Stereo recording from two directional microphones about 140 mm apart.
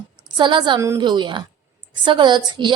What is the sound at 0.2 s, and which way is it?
Speech, 35° right (ahead or behind).